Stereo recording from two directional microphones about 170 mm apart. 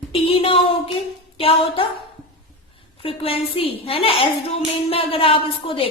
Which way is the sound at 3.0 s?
35° left (ahead or behind).